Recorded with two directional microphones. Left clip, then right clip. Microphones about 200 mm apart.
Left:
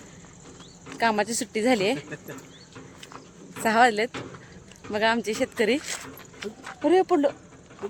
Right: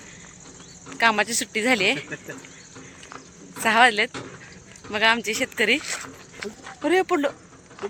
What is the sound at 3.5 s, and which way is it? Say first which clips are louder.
Speech: right 3 dB; 25° left (ahead or behind).